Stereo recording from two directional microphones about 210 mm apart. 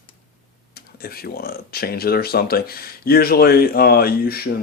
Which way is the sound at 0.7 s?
45° left (ahead or behind).